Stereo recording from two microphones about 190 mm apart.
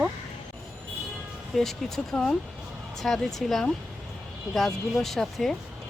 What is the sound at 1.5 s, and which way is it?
Speech, centre (ahead or behind).